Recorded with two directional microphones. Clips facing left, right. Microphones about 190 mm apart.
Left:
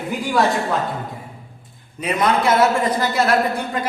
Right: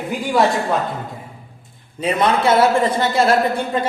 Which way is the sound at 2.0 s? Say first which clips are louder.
Right 2 dB; 30° right (ahead or behind).